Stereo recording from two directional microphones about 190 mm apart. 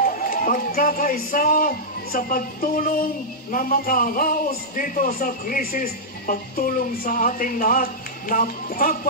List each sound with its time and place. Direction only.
0.0 s a man's voice: 45° left (ahead or behind)